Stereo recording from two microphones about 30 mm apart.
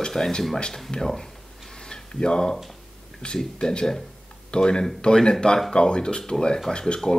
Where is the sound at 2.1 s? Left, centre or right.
Left.